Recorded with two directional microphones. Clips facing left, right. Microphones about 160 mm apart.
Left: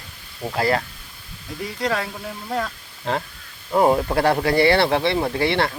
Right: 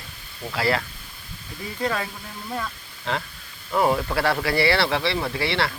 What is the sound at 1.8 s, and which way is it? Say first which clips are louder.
Speech: left 2 dB; 90° left.